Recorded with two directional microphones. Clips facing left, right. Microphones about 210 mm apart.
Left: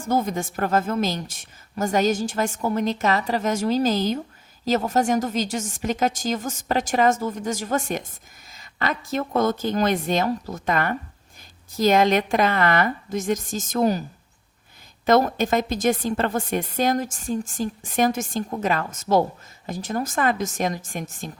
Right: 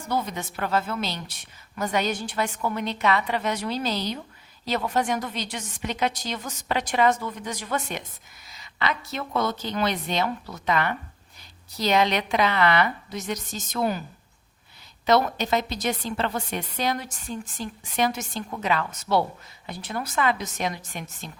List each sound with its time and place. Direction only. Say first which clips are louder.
0.0 s a woman's voice: left 5 dB; 45° left (ahead or behind)
15.0 s a woman's voice: left 3 dB; 50° left (ahead or behind)